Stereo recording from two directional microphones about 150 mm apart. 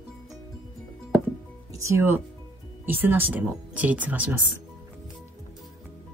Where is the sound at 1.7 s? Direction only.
20° right (ahead or behind).